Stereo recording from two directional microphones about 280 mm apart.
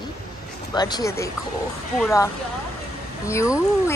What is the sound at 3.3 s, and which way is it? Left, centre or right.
Speech, centre.